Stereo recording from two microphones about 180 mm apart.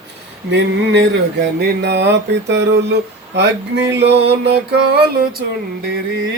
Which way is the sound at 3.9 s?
70° right (ahead or behind).